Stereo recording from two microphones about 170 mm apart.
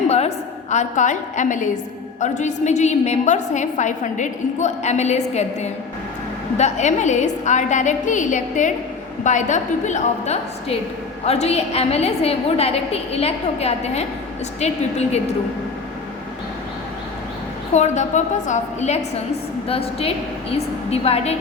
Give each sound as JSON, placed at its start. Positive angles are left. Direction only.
{"t": 0.1, "sound": "a woman's voice", "side_deg": 40}
{"t": 17.7, "sound": "a woman's voice", "side_deg": 45}